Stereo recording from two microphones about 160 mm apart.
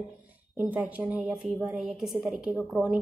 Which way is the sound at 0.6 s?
10° right (ahead or behind).